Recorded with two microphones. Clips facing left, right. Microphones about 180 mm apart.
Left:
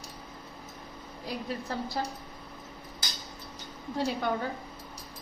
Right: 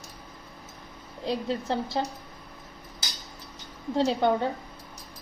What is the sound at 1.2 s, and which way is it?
Speech, 25° right (ahead or behind).